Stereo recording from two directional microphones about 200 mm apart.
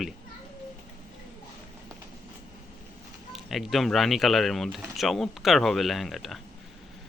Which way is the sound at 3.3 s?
Centre (ahead or behind).